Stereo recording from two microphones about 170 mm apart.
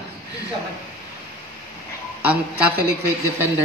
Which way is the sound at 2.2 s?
10° right (ahead or behind).